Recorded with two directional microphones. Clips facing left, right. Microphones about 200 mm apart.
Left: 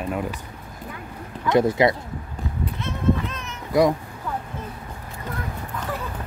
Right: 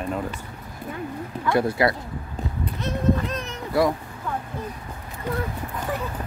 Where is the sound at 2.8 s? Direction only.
35° right (ahead or behind).